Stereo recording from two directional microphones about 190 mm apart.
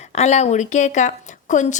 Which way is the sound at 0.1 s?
35° left (ahead or behind).